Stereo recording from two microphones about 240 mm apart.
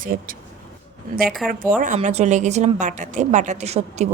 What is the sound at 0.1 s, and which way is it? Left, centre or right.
A woman's voice, right.